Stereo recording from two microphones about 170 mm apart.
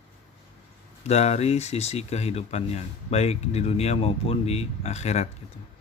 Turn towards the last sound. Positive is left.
turn(degrees=40)  # may be behind; listen again after turning